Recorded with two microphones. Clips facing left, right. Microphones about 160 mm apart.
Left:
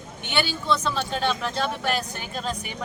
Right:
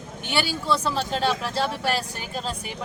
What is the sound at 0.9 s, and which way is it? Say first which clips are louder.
Speech: right 2 dB; 35° right (ahead or behind).